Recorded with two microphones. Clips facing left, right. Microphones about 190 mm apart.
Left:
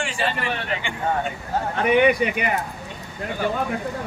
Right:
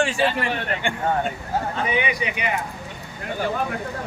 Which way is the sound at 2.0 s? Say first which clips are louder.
Left 7 dB; 50° left (ahead or behind).